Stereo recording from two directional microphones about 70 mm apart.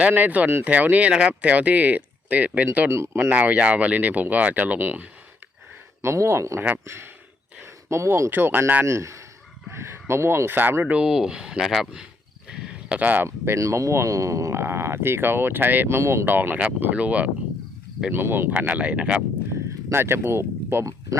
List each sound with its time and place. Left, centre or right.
0.0 s speech: right
2.9 s speech: right
3.3 s speech: right
6.0 s speech: right
10.9 s speech: centre
12.5 s a sound: centre
13.2 s speech: right
16.0 s speech: right
16.3 s speech: right
18.1 s speech: right
19.9 s speech: right